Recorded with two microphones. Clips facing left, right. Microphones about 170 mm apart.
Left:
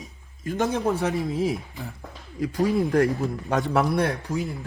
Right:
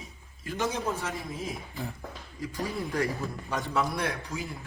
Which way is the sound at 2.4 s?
70° left (ahead or behind).